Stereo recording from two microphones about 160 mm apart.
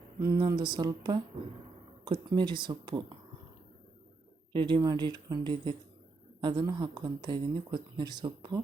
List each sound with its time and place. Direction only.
0.2 s speech: 25° right (ahead or behind)
4.5 s speech: 30° right (ahead or behind)